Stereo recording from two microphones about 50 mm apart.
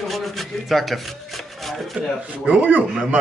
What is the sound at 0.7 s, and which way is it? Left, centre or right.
Speech, centre.